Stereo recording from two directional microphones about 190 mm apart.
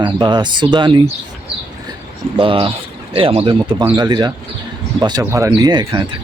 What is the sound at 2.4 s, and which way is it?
Speech, 30° right (ahead or behind).